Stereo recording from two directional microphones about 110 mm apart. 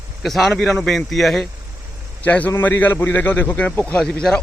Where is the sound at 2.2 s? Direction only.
15° left (ahead or behind).